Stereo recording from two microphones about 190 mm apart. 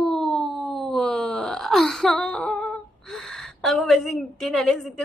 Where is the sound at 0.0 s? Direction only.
Centre (ahead or behind).